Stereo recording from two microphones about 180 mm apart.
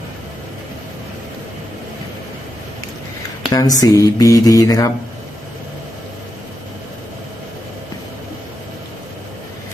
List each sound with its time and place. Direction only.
3.5 s speech: 20° left (ahead or behind)